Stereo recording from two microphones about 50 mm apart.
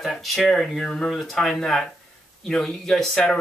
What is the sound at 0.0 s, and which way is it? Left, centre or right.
Speech, centre.